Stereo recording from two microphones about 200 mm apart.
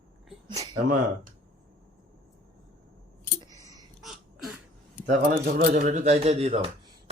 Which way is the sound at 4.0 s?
Centre (ahead or behind).